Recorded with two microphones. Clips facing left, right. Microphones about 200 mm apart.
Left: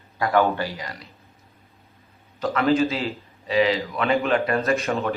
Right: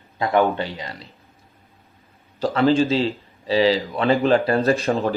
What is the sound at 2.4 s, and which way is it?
A man's voice, 30° right (ahead or behind).